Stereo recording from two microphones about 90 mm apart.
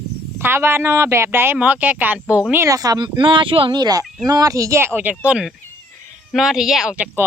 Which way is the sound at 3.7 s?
45° right (ahead or behind).